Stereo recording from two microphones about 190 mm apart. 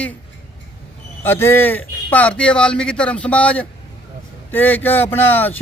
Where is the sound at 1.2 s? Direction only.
10° left (ahead or behind).